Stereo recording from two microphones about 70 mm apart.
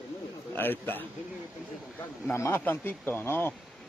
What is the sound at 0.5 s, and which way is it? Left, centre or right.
Snicker, left.